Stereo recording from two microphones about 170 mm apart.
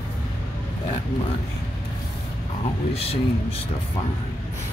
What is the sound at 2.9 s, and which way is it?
Speech, 35° left (ahead or behind).